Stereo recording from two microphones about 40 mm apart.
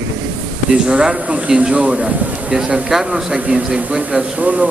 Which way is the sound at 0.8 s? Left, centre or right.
Right.